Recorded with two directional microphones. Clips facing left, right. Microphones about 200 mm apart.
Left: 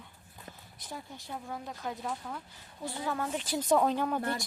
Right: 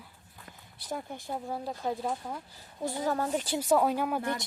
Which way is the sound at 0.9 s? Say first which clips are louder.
Right 7 dB; 50° right (ahead or behind).